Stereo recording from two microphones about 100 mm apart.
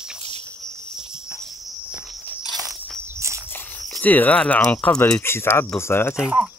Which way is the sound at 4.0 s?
15° left (ahead or behind).